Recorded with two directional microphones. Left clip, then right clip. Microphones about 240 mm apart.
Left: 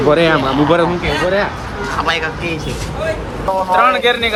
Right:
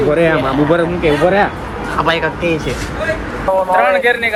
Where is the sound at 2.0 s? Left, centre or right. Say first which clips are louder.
Right 3 dB; centre.